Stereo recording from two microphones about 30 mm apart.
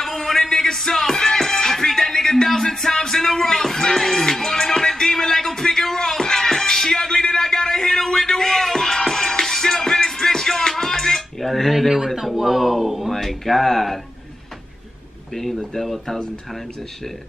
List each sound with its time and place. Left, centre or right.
0.0 s music: centre
3.2 s a sound: centre
3.8 s music: centre
11.0 s a sound: centre
12.4 s speech: centre
13.1 s speech: centre
15.3 s speech: centre